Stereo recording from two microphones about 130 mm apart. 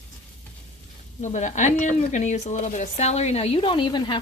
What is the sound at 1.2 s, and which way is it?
Speech, 65° left (ahead or behind).